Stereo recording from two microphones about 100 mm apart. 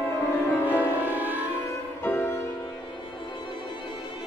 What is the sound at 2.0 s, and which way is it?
Music, 20° left (ahead or behind).